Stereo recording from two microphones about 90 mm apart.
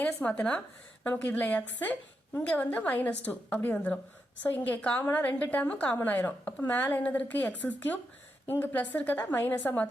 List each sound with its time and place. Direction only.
0.0 s a woman's voice: 15° left (ahead or behind)